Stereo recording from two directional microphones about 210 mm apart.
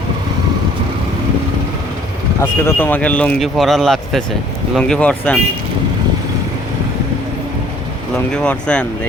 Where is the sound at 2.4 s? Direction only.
10° left (ahead or behind).